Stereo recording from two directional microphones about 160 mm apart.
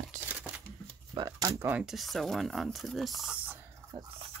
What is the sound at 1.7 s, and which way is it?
Speech, 5° right (ahead or behind).